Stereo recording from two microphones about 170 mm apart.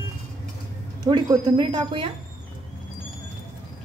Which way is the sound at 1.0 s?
25° right (ahead or behind).